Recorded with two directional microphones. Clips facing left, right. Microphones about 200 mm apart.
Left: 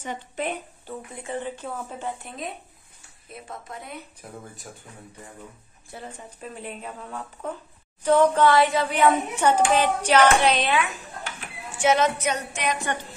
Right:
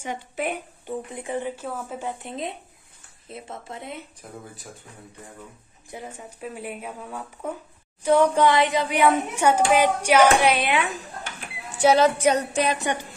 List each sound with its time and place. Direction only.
0.0 s speech: 10° right (ahead or behind)
2.2 s speech: 25° right (ahead or behind)
4.2 s speech: 5° left (ahead or behind)
5.9 s speech: 10° right (ahead or behind)
11.8 s music: 35° right (ahead or behind)